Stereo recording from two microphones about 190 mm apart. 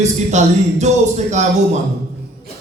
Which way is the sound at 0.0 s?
40° right (ahead or behind).